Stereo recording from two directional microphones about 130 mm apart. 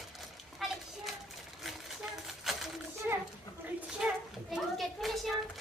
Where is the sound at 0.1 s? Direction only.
Centre (ahead or behind).